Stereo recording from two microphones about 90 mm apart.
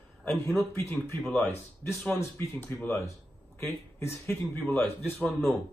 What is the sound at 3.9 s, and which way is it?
Speech, 30° left (ahead or behind).